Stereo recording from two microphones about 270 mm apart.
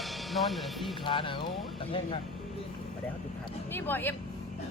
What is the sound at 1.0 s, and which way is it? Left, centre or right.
Speech, centre.